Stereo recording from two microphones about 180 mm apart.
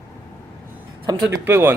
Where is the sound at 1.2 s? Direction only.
10° right (ahead or behind).